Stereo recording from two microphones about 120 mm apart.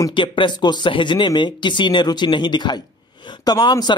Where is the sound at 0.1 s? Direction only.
45° left (ahead or behind).